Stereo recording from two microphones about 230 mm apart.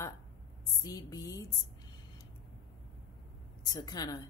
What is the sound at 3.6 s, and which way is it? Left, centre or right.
Speech, centre.